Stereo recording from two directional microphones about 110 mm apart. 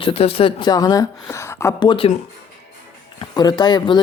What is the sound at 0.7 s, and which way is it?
Speech, 35° left (ahead or behind).